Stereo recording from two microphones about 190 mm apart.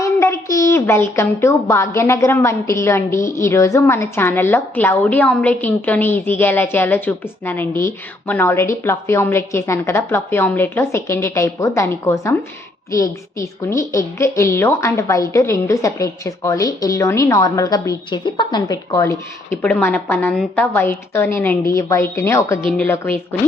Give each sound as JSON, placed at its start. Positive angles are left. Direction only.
{"t": 0.0, "sound": "a woman's voice", "side_deg": 15}